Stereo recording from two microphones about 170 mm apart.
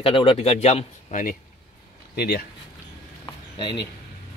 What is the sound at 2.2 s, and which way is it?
Speech, 65° left (ahead or behind).